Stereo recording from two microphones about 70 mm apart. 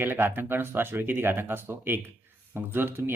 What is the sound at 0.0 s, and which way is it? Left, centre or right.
Speech, right.